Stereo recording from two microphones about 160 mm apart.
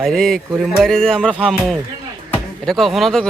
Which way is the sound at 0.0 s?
Centre (ahead or behind).